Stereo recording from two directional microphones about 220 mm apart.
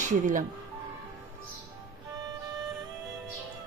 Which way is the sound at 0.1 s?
35° right (ahead or behind).